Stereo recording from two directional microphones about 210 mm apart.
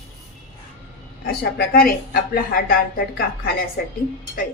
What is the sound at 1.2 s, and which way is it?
Speech, 50° left (ahead or behind).